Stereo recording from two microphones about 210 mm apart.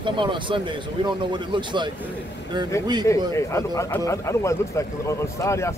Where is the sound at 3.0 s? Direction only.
15° left (ahead or behind).